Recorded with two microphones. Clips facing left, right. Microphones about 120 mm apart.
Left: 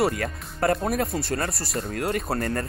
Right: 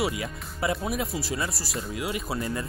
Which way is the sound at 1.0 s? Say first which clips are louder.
Left 4 dB; centre (ahead or behind).